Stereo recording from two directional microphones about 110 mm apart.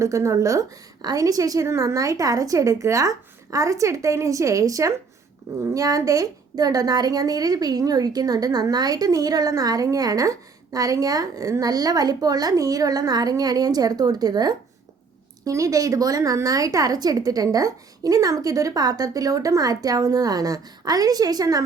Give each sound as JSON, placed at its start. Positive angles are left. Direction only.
{"t": 0.0, "sound": "a woman's voice", "side_deg": -30}